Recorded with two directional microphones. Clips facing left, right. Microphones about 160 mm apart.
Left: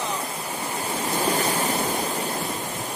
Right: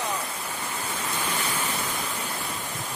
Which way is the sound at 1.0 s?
35° left (ahead or behind).